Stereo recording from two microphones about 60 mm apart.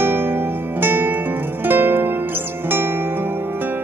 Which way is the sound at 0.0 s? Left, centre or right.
Right.